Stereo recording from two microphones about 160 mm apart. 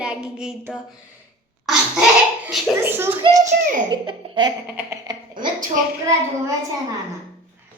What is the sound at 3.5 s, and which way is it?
Speech, 70° right (ahead or behind).